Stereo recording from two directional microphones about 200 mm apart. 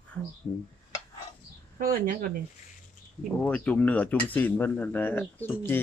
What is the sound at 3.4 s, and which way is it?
Speech, 5° left (ahead or behind).